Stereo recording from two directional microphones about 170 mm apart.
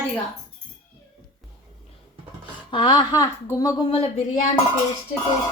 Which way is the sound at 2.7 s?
30° left (ahead or behind).